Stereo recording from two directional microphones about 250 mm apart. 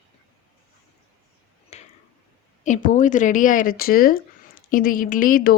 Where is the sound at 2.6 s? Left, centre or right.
Left.